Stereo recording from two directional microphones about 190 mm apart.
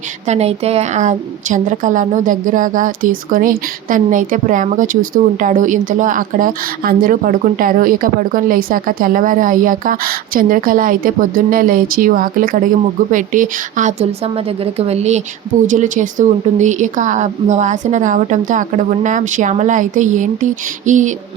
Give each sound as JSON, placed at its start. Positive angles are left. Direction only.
{"t": 0.3, "sound": "a woman's voice", "side_deg": -35}